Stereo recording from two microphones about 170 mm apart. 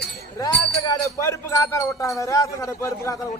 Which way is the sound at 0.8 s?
20° left (ahead or behind).